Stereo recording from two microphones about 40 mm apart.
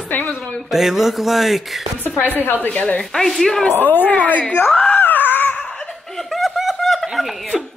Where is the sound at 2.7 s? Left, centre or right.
Left.